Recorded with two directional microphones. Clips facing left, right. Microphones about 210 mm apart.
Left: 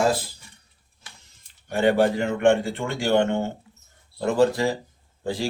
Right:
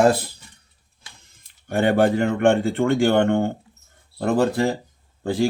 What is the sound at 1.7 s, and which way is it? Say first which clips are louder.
Speech: right 2 dB; 55° right (ahead or behind).